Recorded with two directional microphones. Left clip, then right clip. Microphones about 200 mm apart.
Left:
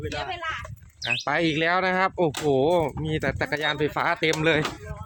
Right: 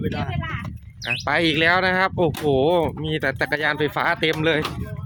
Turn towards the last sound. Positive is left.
turn(degrees=-15)  # may be behind; listen again after turning